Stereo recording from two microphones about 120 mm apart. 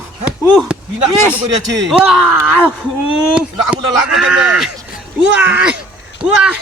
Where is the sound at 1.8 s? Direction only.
5° right (ahead or behind).